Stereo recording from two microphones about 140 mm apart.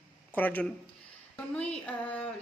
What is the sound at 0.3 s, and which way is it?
Speech, 10° left (ahead or behind).